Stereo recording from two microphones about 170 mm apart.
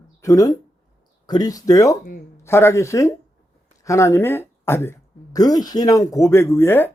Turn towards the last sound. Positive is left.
turn(degrees=15)  # may be behind; listen again after turning